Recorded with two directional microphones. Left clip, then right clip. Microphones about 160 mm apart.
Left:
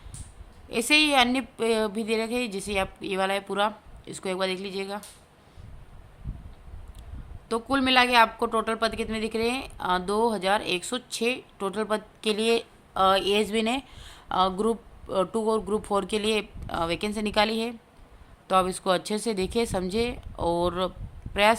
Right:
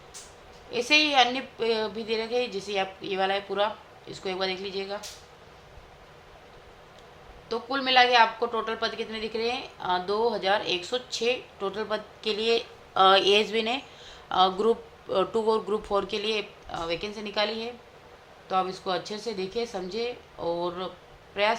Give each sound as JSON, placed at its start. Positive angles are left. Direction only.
{"t": 0.7, "sound": "speech", "side_deg": 45}
{"t": 7.4, "sound": "speech", "side_deg": 45}